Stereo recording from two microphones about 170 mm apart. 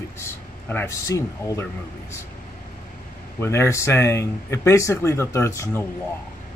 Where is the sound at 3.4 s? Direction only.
15° left (ahead or behind).